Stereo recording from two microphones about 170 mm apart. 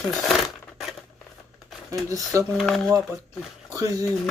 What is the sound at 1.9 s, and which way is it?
Speech, 20° right (ahead or behind).